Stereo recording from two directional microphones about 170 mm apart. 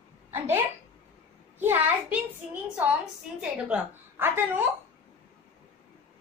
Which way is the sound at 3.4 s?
5° right (ahead or behind).